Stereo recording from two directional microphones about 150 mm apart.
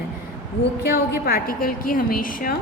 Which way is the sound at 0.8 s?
90° left.